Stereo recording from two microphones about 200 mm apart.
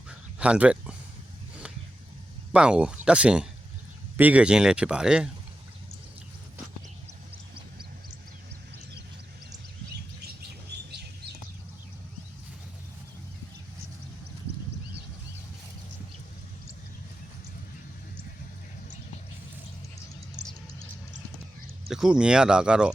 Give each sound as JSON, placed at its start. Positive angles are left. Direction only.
{"t": 0.3, "sound": "speech", "side_deg": -5}
{"t": 2.5, "sound": "speech", "side_deg": -5}
{"t": 10.7, "sound": "bird", "side_deg": -55}
{"t": 21.8, "sound": "speech", "side_deg": 0}